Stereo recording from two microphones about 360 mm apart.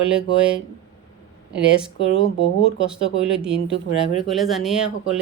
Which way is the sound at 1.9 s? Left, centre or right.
Centre.